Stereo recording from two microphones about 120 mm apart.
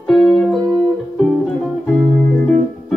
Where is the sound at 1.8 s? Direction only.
5° left (ahead or behind).